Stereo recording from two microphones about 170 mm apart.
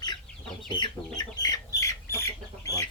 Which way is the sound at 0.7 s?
25° left (ahead or behind).